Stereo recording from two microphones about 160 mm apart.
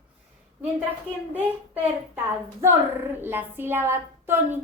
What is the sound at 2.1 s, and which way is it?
A woman's voice, 15° right (ahead or behind).